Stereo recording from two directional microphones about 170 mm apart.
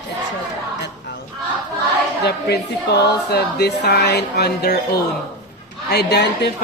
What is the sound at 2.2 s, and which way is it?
Speech, 75° left (ahead or behind).